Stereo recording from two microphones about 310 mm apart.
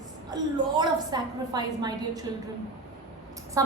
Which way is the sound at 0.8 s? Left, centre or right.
Centre.